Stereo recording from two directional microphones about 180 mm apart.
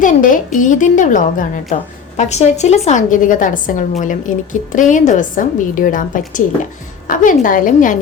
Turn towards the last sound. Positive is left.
turn(degrees=45)  # may be behind; listen again after turning